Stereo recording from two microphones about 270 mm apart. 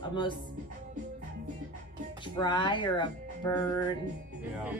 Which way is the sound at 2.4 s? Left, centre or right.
Centre.